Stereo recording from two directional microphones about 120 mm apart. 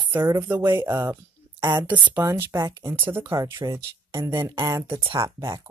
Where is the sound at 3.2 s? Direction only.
30° right (ahead or behind).